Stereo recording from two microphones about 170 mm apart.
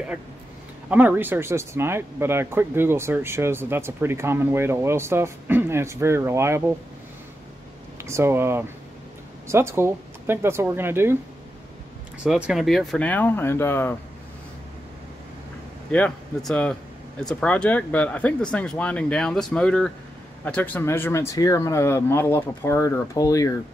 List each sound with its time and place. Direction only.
0.8 s speech: 10° right (ahead or behind)
8.0 s speech: 15° right (ahead or behind)
12.2 s speech: 5° right (ahead or behind); by 13.9 s 15° left (ahead or behind)
15.9 s speech: 5° left (ahead or behind)